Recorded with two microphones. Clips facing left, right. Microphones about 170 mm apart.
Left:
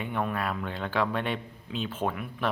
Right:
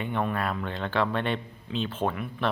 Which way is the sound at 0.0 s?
5° left (ahead or behind).